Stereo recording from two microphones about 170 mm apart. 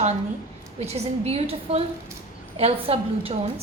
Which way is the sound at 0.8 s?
40° right (ahead or behind).